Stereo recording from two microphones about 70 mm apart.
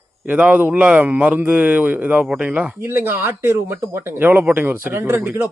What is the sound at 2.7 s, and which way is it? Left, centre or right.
Speech, right.